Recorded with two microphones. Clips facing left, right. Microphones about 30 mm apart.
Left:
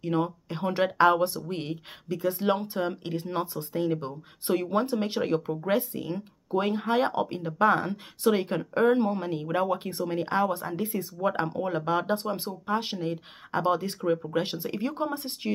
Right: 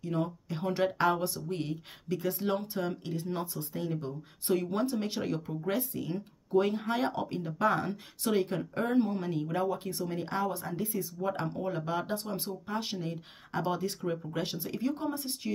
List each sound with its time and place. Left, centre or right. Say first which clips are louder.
0.0 s speech: left 5 dB; left
0.5 s speech: left 3 dB; left
2.0 s speech: left 4 dB; centre
2.4 s speech: left 5 dB; left
8.5 s speech: left 8 dB; left